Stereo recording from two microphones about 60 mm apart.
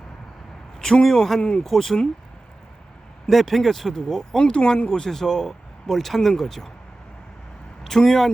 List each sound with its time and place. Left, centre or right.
0.8 s speech: centre
1.4 s speech: centre
1.6 s speech: centre
3.2 s speech: centre
4.4 s speech: centre
7.9 s speech: centre